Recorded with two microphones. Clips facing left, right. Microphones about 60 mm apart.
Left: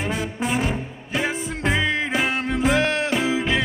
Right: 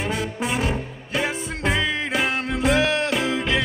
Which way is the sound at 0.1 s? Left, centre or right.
Centre.